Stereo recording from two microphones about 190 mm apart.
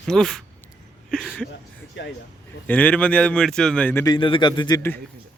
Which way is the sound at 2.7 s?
10° left (ahead or behind).